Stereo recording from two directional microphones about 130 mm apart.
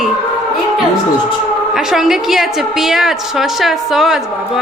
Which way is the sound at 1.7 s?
5° right (ahead or behind).